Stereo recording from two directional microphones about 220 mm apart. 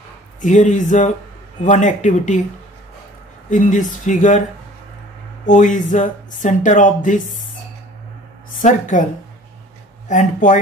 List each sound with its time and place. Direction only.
0.4 s speech: 35° left (ahead or behind)
3.4 s speech: 35° left (ahead or behind)
5.5 s speech: 35° left (ahead or behind)
8.5 s speech: 35° left (ahead or behind)
10.0 s speech: 35° left (ahead or behind)